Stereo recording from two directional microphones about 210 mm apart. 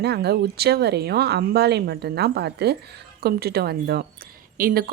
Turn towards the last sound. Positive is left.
turn(degrees=-45)  # may be behind; listen again after turning